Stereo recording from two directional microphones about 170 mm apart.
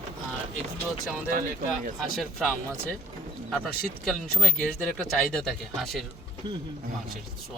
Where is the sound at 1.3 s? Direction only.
50° right (ahead or behind).